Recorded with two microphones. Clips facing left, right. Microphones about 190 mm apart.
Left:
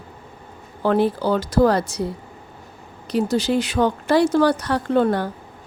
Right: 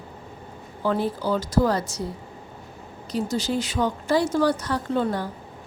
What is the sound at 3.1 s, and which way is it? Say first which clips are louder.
A woman's voice: left 6 dB; 65° left (ahead or behind).